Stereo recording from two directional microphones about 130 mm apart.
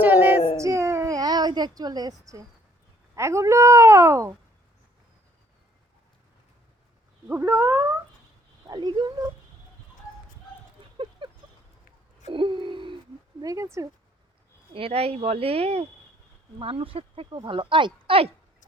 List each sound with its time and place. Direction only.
0.0 s female singing: 15° right (ahead or behind)
0.5 s a sound: 25° right (ahead or behind)
3.2 s a woman's voice: 20° right (ahead or behind)
7.3 s a woman's voice: 15° right (ahead or behind)
8.6 s speech: 30° right (ahead or behind)
10.9 s a sound: 40° right (ahead or behind)
13.4 s speech: 25° right (ahead or behind)
14.7 s speech: 45° right (ahead or behind)